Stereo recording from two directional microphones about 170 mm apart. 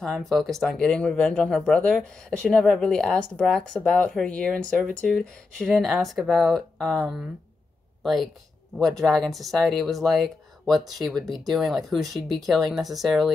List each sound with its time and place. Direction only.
0.0 s speech: centre (ahead or behind)